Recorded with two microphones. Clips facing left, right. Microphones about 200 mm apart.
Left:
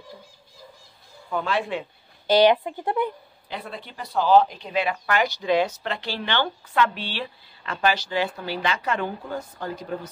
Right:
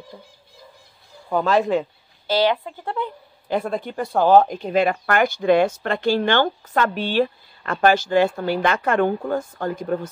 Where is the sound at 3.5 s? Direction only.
45° right (ahead or behind).